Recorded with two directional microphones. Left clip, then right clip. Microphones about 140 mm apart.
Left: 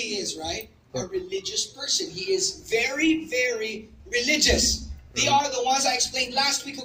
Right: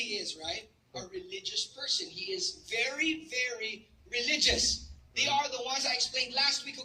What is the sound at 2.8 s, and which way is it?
A woman's voice, 20° right (ahead or behind).